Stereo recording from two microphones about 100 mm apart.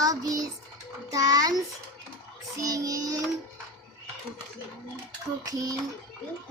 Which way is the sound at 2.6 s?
35° right (ahead or behind).